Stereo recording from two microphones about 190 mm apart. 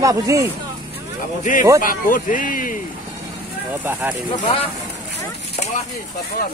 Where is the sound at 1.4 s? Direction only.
45° left (ahead or behind).